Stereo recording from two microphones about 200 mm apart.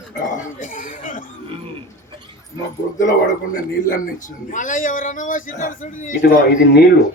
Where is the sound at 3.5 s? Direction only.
40° left (ahead or behind).